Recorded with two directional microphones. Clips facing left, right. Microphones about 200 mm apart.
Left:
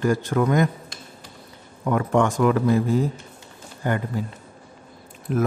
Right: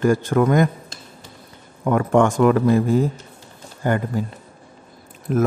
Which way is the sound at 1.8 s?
55° right (ahead or behind).